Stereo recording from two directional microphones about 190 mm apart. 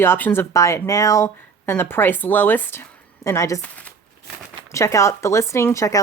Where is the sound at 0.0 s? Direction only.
10° left (ahead or behind).